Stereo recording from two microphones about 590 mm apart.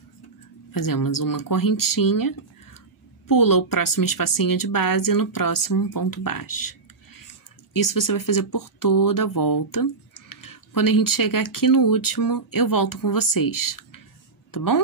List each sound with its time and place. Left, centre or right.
0.7 s speech: left